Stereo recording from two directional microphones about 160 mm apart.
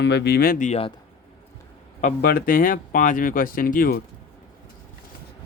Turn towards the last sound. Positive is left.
turn(degrees=65)  # may be behind; listen again after turning